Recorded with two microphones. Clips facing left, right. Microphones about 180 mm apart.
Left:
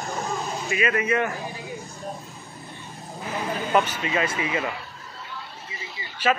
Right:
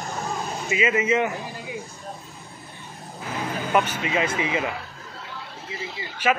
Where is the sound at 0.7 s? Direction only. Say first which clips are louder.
Right 2 dB; 20° right (ahead or behind).